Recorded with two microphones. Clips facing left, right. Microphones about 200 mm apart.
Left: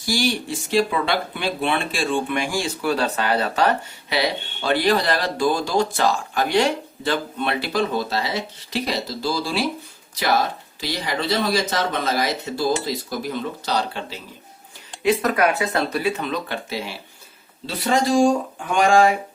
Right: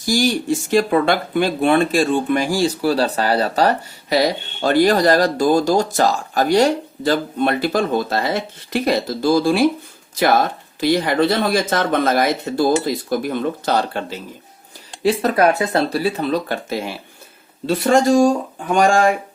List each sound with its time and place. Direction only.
0.0 s speech: 45° right (ahead or behind)
15.0 s speech: 30° right (ahead or behind)